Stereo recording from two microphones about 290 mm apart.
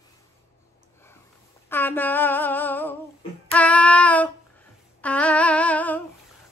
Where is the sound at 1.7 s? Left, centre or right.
Centre.